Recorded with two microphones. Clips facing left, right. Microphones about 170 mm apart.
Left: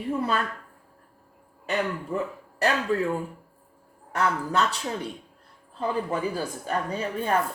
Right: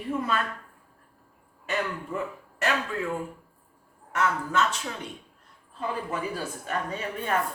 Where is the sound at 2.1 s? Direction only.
35° left (ahead or behind).